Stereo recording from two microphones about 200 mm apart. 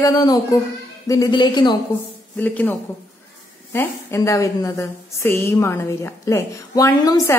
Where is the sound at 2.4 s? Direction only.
10° left (ahead or behind).